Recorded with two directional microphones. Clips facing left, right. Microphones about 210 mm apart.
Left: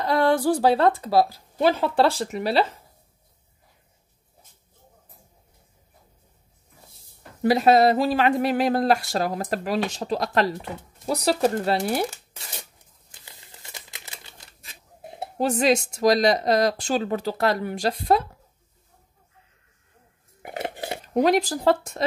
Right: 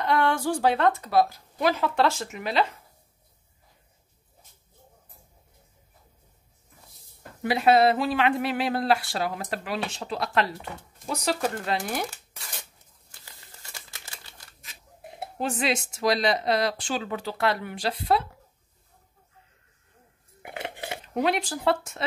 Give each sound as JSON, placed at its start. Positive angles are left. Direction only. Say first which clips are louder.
{"t": 0.0, "sound": "speech", "louder": "left 4 dB", "side_deg": 35}
{"t": 7.4, "sound": "speech", "louder": "left 3 dB", "side_deg": 40}
{"t": 13.1, "sound": "a sound", "louder": "left 2 dB", "side_deg": 20}
{"t": 15.1, "sound": "speech", "louder": "left 6 dB", "side_deg": 40}
{"t": 20.4, "sound": "dishes", "louder": "left 5 dB", "side_deg": 40}